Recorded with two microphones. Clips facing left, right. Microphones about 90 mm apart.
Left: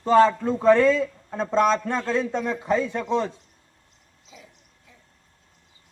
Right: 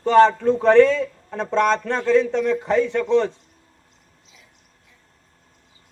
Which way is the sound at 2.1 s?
90° right.